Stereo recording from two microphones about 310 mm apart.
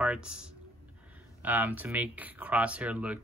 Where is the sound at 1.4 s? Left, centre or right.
Centre.